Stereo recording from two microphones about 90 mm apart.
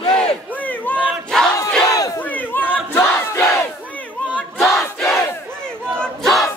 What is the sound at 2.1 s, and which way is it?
Crowd, 20° left (ahead or behind).